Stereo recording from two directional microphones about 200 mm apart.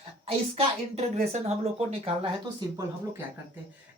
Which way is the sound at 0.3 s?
30° right (ahead or behind).